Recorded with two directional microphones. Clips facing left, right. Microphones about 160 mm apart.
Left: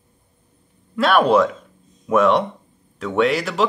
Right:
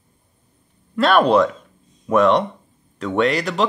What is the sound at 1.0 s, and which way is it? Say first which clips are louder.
Speech: right 1 dB; 5° left (ahead or behind).